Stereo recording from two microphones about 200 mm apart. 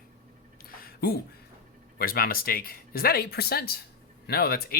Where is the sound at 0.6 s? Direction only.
45° left (ahead or behind).